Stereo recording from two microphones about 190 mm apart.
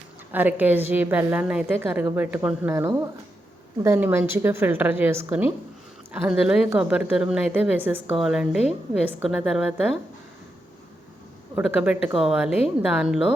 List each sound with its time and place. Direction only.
0.3 s a woman's voice: 10° right (ahead or behind)
11.5 s a woman's voice: 5° right (ahead or behind)